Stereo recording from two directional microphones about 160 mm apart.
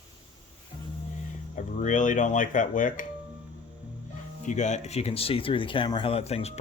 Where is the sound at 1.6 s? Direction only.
50° left (ahead or behind).